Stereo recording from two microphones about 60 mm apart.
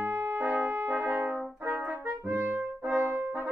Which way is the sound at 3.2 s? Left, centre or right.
Right.